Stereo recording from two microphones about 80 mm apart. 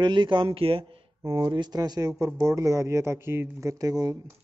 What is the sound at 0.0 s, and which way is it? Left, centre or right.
Speech, right.